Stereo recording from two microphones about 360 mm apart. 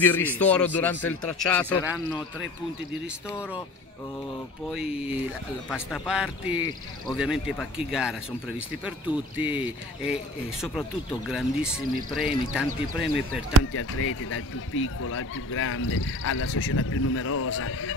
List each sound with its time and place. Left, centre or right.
0.0 s a man's voice: centre
4.6 s a man's voice: centre
11.2 s a man's voice: centre
13.7 s speech: left